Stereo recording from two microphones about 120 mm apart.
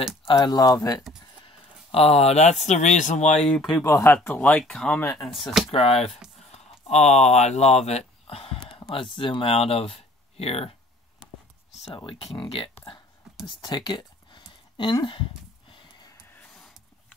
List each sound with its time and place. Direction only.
0.4 s speech: 30° left (ahead or behind)
1.9 s speech: 55° left (ahead or behind); by 3.3 s 80° left
3.3 s speech: 5° left (ahead or behind)
3.8 s speech: 20° left (ahead or behind)
4.2 s speech: 10° left (ahead or behind)
5.7 s speech: 55° left (ahead or behind)
6.5 s speech: 70° left (ahead or behind)
8.3 s a sound: 55° left (ahead or behind)
8.5 s speech: 45° left (ahead or behind)
12.1 s speech: 50° left (ahead or behind)
13.6 s a sound: 35° left (ahead or behind)